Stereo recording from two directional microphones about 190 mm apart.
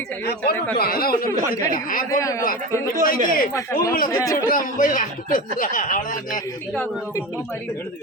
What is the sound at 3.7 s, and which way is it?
Speech, 50° left (ahead or behind).